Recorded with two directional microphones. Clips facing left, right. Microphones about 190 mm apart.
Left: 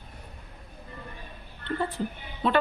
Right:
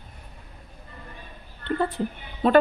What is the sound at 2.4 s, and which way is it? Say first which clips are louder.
Speech: right 7 dB; 45° right (ahead or behind).